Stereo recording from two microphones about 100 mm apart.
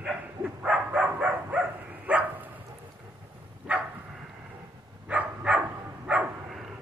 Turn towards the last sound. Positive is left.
turn(degrees=-15)  # may be behind; listen again after turning